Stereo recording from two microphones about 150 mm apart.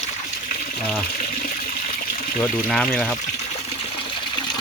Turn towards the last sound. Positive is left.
turn(degrees=5)  # may be behind; listen again after turning